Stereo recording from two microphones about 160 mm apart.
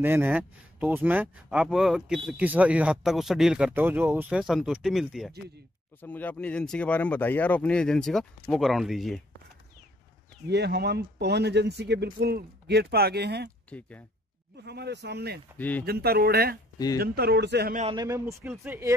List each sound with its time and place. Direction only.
0.0 s speech: 10° right (ahead or behind)
5.9 s speech: 10° left (ahead or behind)
10.5 s speech: 90° right
13.7 s speech: 10° left (ahead or behind)
14.6 s speech: 90° right
15.5 s speech: 10° left (ahead or behind)
15.8 s speech: 80° right
16.7 s speech: 25° left (ahead or behind)
17.0 s speech: 75° right (ahead or behind); by 17.7 s 90° right
17.9 s speech: 20° right (ahead or behind)